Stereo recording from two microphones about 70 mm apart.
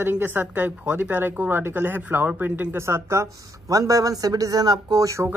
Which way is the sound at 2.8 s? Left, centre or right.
Right.